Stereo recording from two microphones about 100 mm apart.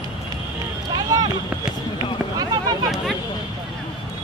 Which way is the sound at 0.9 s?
40° right (ahead or behind).